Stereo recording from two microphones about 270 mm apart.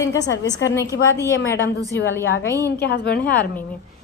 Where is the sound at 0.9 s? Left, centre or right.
Left.